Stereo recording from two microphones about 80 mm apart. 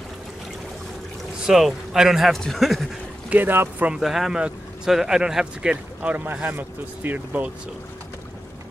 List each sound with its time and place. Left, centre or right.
1.4 s a man's voice: centre
3.3 s speech: right
3.9 s speech: centre; by 7.5 s right